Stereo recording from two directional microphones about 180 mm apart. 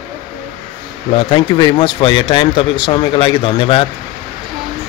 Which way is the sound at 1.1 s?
30° left (ahead or behind).